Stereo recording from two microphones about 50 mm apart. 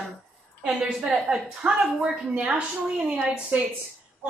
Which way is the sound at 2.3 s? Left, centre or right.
Right.